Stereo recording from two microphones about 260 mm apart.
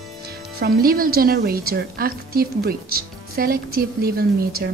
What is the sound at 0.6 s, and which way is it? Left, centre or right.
A woman's voice, right.